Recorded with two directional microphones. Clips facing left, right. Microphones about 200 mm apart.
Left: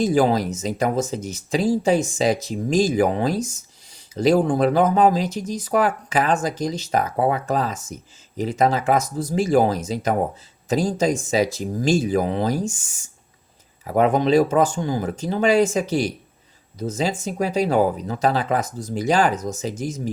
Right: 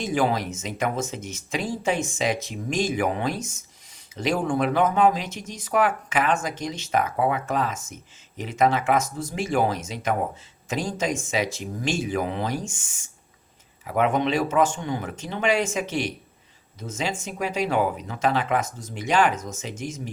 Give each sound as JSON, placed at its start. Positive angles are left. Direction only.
{"t": 0.0, "sound": "speech", "side_deg": 35}